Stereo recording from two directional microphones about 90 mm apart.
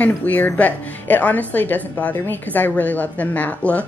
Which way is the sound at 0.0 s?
15° left (ahead or behind).